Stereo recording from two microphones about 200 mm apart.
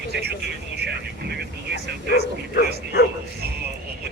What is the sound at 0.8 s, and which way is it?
Vehicle, 55° right (ahead or behind).